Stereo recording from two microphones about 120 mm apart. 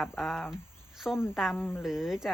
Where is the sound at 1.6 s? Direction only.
15° left (ahead or behind).